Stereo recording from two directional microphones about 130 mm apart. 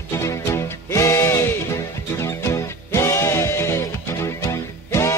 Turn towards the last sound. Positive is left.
turn(degrees=20)  # may be behind; listen again after turning